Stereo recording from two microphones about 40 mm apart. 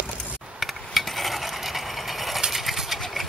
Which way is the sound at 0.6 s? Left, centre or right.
Centre.